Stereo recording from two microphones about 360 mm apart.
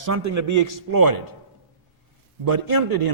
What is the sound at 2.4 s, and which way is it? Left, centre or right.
Speech, right.